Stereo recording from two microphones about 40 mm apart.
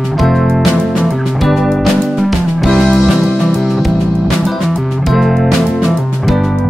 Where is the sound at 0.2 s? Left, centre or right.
Centre.